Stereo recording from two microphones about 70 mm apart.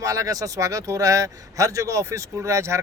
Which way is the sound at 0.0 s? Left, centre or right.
Right.